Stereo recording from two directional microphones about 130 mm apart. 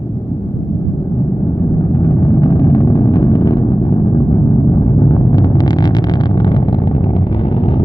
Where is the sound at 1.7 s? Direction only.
25° left (ahead or behind).